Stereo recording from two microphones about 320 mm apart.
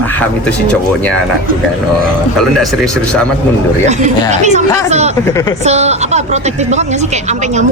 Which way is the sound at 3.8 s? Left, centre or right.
Right.